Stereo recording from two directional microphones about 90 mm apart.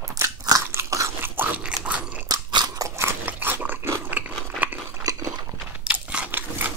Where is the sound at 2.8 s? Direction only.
30° right (ahead or behind).